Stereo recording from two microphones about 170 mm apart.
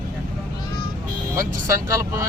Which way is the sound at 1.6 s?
15° right (ahead or behind).